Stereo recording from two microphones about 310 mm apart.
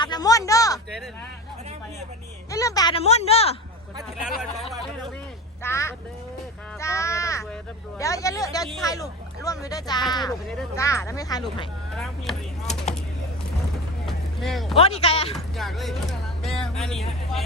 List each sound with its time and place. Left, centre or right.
0.0 s a sound: centre
2.5 s a woman's voice: centre
5.6 s a sound: centre
6.7 s crow: centre
7.9 s speech: centre
11.9 s speech: centre
14.1 s vehicle: centre
14.8 s a woman's voice: centre
15.5 s a sound: centre